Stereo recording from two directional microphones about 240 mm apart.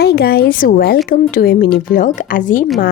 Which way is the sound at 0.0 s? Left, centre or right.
Left.